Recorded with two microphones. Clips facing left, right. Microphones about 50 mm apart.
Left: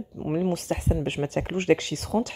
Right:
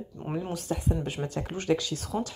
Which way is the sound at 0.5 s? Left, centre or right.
Left.